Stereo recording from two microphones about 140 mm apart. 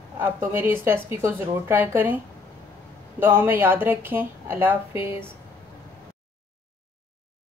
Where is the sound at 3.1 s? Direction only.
15° right (ahead or behind).